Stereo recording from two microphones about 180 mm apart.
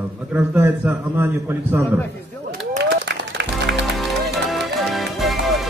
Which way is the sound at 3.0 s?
70° right (ahead or behind).